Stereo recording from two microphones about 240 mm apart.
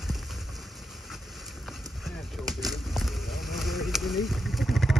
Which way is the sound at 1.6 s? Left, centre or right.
Centre.